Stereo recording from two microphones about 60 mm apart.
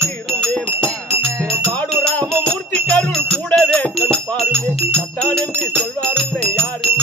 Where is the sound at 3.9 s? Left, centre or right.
Centre.